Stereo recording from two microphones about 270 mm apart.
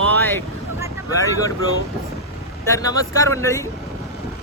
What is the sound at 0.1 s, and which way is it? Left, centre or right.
Vehicle, centre.